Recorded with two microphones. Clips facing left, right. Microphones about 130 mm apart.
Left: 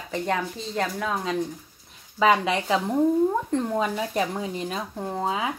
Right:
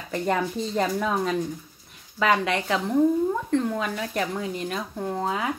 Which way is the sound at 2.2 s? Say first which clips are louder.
Left 2 dB; 20° left (ahead or behind).